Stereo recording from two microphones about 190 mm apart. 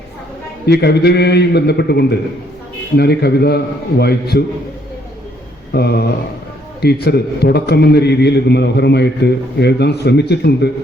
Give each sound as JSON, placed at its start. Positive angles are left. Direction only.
{"t": 0.6, "sound": "a man's voice", "side_deg": 60}
{"t": 5.7, "sound": "a man's voice", "side_deg": 55}